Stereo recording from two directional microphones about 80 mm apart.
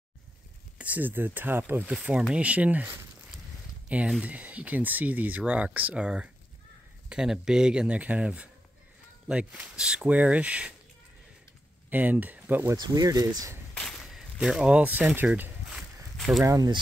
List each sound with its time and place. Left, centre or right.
0.7 s speech: right
4.2 s speech: centre
11.9 s speech: right
12.7 s speech: right
13.7 s a sound: centre
14.0 s speech: centre; by 15.2 s right
15.7 s a sound: centre
16.4 s speech: right